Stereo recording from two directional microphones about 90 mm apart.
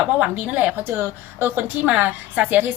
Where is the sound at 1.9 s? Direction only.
15° right (ahead or behind).